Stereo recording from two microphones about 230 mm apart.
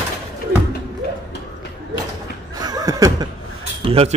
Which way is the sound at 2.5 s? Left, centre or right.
Centre.